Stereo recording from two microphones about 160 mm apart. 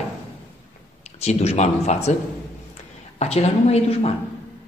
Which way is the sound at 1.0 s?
45° left (ahead or behind).